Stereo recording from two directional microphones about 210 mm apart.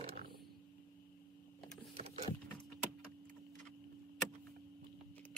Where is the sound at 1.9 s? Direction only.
30° right (ahead or behind).